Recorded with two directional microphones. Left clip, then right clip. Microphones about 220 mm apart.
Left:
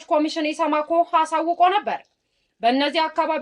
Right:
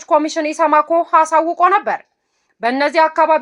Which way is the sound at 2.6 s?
25° right (ahead or behind).